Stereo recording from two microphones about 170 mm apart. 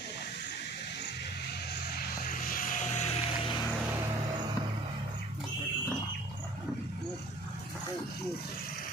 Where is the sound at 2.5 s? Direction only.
55° left (ahead or behind).